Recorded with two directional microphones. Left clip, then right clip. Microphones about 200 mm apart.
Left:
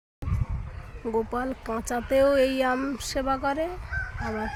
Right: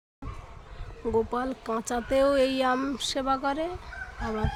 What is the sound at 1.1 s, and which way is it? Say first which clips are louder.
Speech: even; 5° left (ahead or behind).